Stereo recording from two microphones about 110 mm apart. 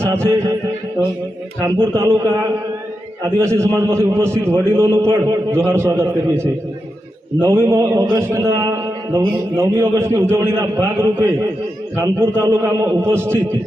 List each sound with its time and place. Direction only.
0.0 s music: 25° right (ahead or behind)
1.6 s a man's voice: 25° right (ahead or behind)
3.2 s a man's voice: 25° right (ahead or behind)